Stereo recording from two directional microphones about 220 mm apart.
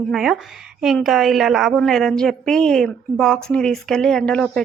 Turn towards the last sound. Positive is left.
turn(degrees=5)  # may be behind; listen again after turning